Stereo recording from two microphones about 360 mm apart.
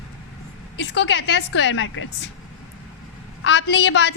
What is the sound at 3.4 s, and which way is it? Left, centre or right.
Speech, left.